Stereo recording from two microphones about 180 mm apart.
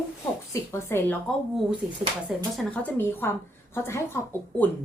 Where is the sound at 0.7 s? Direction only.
15° left (ahead or behind).